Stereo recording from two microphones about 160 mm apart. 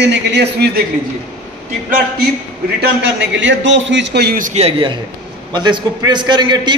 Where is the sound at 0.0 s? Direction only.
90° right.